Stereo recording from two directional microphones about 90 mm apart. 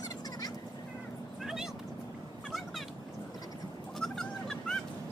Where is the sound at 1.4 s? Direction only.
5° right (ahead or behind).